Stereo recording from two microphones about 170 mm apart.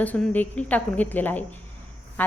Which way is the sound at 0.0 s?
10° left (ahead or behind).